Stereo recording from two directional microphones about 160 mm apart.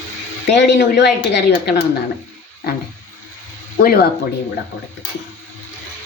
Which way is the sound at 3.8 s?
70° left (ahead or behind).